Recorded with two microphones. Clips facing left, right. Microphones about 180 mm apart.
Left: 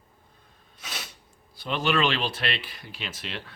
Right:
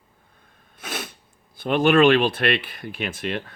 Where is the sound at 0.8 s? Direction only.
55° right (ahead or behind).